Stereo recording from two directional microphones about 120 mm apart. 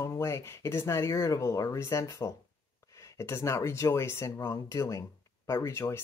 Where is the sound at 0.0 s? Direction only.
25° left (ahead or behind).